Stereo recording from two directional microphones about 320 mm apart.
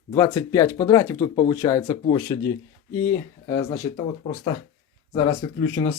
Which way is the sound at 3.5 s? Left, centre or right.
Centre.